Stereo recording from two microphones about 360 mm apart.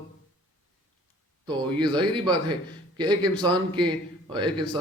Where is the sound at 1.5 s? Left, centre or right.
Centre.